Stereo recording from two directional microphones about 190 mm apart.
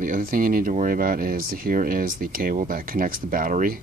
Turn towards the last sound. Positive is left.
turn(degrees=-45)  # may be behind; listen again after turning